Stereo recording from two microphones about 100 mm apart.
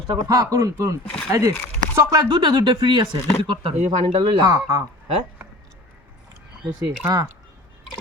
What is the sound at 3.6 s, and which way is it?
Speech, 90° right.